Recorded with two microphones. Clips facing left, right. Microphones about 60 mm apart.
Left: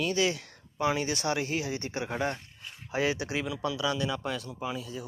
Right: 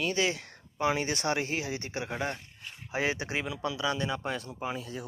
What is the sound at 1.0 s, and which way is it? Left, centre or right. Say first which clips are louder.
Speech: even; right.